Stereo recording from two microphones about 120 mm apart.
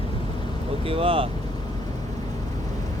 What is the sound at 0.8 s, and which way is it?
Speech, 50° right (ahead or behind).